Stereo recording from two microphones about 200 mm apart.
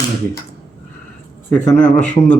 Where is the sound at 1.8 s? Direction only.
40° left (ahead or behind).